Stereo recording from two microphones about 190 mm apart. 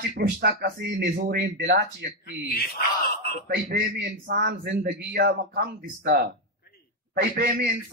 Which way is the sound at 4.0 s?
60° right (ahead or behind).